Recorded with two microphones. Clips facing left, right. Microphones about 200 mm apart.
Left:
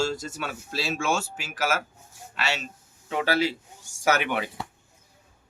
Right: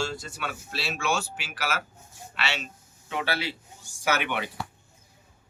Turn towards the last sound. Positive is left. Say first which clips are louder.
# left 3 dB
turn(degrees=40)  # may be behind; listen again after turning